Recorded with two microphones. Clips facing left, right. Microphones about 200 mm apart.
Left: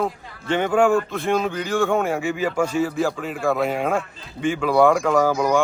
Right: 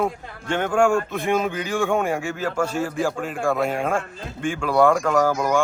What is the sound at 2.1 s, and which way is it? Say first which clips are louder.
A man's voice: left 2 dB; 10° left (ahead or behind).